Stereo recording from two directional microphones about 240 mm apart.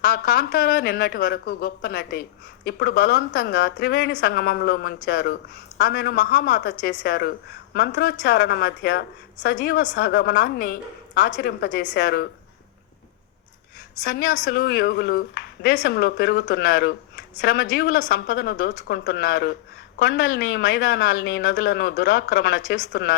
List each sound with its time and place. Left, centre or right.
0.0 s speech: left
14.0 s speech: left